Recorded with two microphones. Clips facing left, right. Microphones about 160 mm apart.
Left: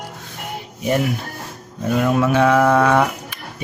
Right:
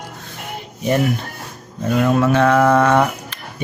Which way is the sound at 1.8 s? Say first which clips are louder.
Right 2 dB; 5° left (ahead or behind).